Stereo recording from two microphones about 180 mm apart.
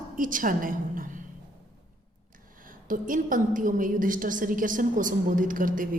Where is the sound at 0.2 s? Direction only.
50° right (ahead or behind).